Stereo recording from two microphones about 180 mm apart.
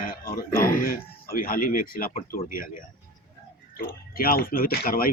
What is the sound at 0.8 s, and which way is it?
Speech, 55° left (ahead or behind).